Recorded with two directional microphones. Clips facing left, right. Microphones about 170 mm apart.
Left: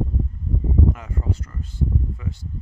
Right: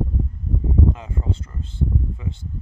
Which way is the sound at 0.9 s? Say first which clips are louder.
Right 1 dB; 25° right (ahead or behind).